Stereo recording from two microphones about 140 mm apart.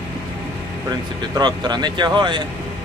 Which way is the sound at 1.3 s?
30° right (ahead or behind).